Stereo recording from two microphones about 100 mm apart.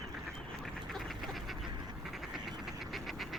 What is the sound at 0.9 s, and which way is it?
Duck, centre (ahead or behind).